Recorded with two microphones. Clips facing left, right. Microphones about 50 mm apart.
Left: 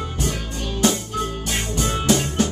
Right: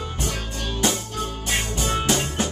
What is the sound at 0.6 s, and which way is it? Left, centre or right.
Music, centre.